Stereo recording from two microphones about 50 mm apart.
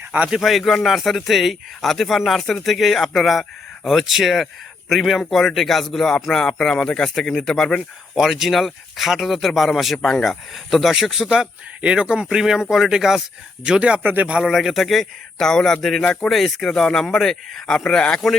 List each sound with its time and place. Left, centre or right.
0.3 s speech: centre
8.1 s speech: centre
11.8 s speech: right
12.4 s speech: centre
13.7 s speech: right
14.0 s a man's voice: right
14.4 s speech: centre